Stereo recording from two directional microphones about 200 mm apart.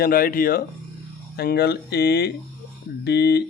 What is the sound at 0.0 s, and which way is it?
Speech, 45° left (ahead or behind).